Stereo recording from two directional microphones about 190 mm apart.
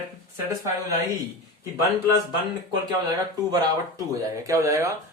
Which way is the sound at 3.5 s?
20° right (ahead or behind).